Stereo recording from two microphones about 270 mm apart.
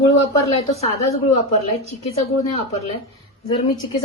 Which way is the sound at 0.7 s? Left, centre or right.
Left.